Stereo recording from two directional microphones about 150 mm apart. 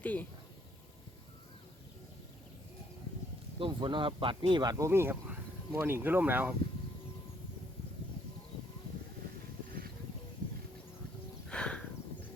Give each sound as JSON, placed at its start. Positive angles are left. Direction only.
{"t": 0.0, "sound": "speech", "side_deg": 10}
{"t": 3.6, "sound": "speech", "side_deg": -30}
{"t": 11.4, "sound": "a sound", "side_deg": 5}